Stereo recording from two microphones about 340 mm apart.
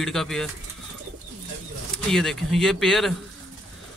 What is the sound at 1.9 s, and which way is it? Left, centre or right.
Speech, centre.